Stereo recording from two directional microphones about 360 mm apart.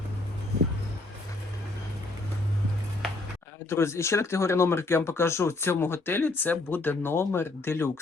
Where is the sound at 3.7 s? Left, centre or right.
Centre.